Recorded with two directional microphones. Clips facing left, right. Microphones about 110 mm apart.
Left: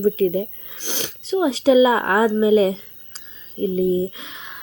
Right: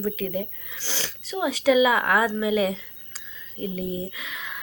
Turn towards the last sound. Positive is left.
turn(degrees=25)  # may be behind; listen again after turning